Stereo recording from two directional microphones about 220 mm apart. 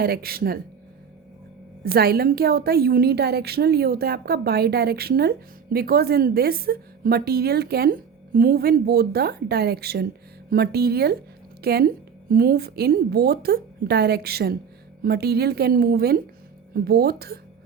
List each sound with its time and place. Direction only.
0.0 s a woman's voice: 45° right (ahead or behind)
1.8 s a woman's voice: 45° right (ahead or behind)